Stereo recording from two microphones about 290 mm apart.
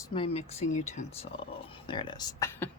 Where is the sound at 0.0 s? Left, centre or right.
Centre.